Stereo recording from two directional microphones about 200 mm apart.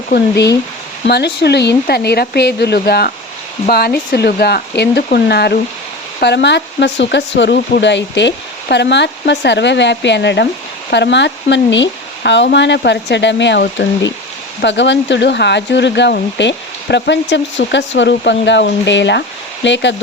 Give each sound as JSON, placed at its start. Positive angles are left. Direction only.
{"t": 0.1, "sound": "speech", "side_deg": 55}